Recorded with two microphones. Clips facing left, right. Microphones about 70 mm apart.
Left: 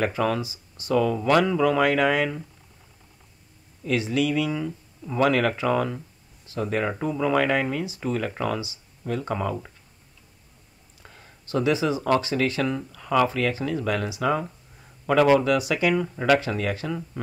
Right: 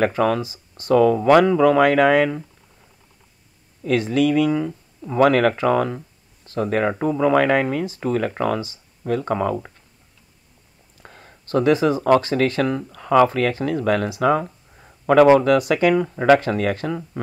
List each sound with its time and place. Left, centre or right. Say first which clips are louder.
0.0 s speech: right 5 dB; right
3.8 s speech: right 5 dB; right
4.5 s speech: right 7 dB; right
11.0 s a sound: right 5 dB; right
12.2 s speech: right 5 dB; right
14.4 s a sound: right 3 dB; right
15.3 s speech: right 5 dB; right
15.9 s speech: right 6 dB; right
16.3 s speech: right 5 dB; right